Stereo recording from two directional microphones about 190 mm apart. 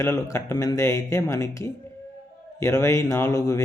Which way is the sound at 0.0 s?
15° left (ahead or behind).